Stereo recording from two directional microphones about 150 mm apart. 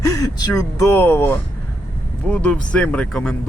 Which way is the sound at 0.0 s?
25° left (ahead or behind).